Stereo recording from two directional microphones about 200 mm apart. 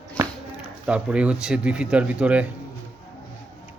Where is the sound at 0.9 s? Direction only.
5° right (ahead or behind).